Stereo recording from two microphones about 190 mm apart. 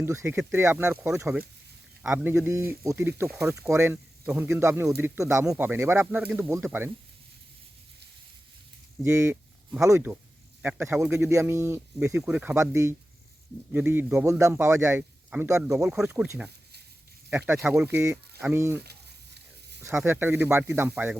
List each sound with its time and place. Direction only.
0.0 s speech: 15° right (ahead or behind)
9.0 s a man's voice: 15° right (ahead or behind)
18.8 s sizzle: 60° right (ahead or behind)
19.8 s speech: 10° right (ahead or behind)